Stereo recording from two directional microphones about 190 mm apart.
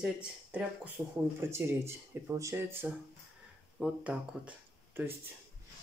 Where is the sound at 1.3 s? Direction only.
15° right (ahead or behind).